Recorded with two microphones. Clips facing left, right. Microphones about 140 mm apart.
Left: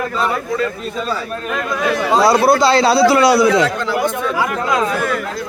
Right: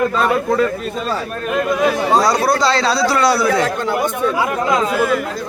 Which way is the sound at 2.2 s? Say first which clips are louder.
Left 3 dB; 30° left (ahead or behind).